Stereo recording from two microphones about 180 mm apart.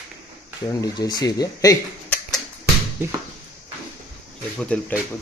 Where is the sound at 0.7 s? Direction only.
20° left (ahead or behind).